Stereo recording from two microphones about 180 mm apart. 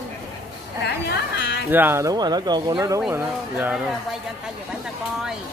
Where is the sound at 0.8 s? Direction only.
70° left (ahead or behind).